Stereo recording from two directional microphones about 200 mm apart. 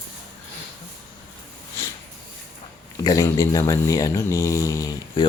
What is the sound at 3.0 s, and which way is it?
Speech, 15° left (ahead or behind).